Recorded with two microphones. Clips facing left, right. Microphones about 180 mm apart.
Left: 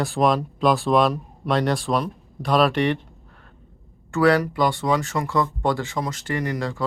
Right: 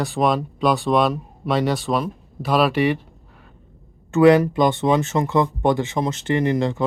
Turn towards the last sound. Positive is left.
turn(degrees=-20)  # may be behind; listen again after turning